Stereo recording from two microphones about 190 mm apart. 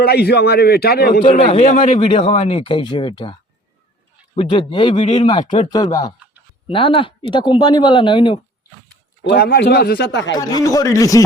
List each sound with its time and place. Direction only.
0.0 s a man's voice: 55° left (ahead or behind)
1.5 s a man's voice: 40° left (ahead or behind)
1.8 s speech: 25° left (ahead or behind)
4.4 s speech: 25° left (ahead or behind)
9.2 s a man's voice: 55° left (ahead or behind)
10.6 s speech: 20° left (ahead or behind)